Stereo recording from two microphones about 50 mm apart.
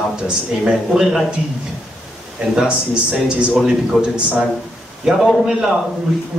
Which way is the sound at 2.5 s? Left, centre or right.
Centre.